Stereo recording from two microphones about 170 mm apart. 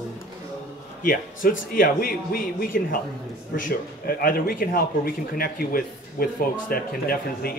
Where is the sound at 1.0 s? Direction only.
55° left (ahead or behind).